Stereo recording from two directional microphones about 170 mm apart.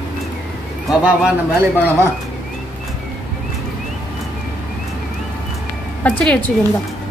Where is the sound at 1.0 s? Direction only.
10° right (ahead or behind).